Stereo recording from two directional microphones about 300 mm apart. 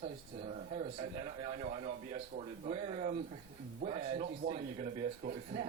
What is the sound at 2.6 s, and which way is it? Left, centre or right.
A man's voice, right.